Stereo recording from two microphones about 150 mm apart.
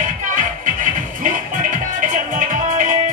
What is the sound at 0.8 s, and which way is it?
Music, 60° right (ahead or behind).